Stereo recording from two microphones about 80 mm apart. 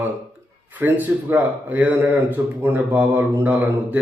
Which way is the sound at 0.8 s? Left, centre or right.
Right.